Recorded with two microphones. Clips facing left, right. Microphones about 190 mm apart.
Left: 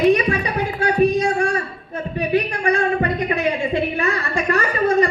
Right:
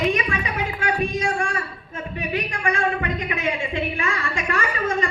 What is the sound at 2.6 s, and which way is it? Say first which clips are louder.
A woman's voice: left 5 dB; 40° left (ahead or behind).